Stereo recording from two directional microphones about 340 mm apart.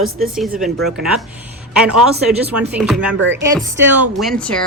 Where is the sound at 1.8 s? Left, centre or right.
Centre.